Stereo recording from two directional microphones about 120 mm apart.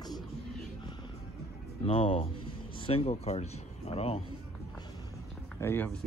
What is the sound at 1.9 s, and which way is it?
Speech, 50° left (ahead or behind).